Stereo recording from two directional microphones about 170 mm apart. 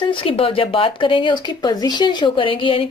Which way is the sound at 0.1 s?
30° left (ahead or behind).